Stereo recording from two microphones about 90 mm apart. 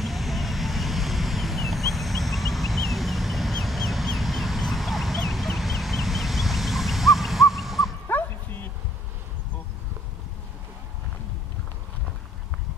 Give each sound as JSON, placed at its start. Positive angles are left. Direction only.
{"t": 0.0, "sound": "vehicle", "side_deg": 0}
{"t": 8.1, "sound": "bow-wow", "side_deg": 20}